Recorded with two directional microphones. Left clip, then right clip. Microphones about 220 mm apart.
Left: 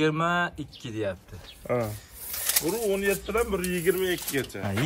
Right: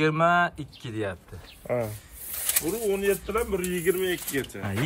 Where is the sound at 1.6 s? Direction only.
45° left (ahead or behind).